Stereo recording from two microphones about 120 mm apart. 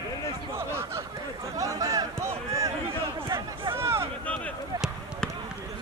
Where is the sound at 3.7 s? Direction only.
20° right (ahead or behind).